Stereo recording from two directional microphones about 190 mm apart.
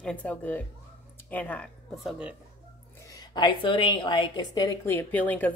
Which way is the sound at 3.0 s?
20° left (ahead or behind).